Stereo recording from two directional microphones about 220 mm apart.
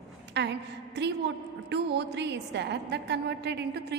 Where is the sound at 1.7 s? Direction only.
50° right (ahead or behind).